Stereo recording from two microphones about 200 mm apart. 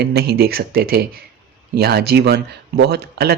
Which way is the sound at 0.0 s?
55° right (ahead or behind).